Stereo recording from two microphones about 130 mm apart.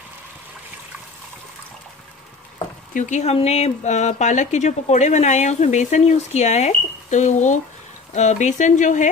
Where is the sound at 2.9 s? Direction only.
70° left (ahead or behind).